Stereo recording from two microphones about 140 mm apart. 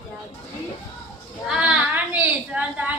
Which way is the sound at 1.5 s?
10° right (ahead or behind).